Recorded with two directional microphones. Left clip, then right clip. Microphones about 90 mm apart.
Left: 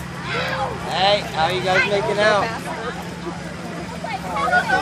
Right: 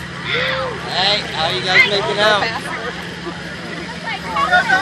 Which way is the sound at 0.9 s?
10° right (ahead or behind).